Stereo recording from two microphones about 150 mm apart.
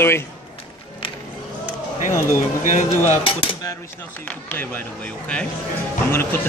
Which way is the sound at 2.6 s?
55° left (ahead or behind).